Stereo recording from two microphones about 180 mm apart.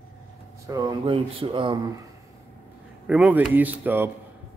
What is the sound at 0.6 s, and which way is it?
Speech, 20° right (ahead or behind).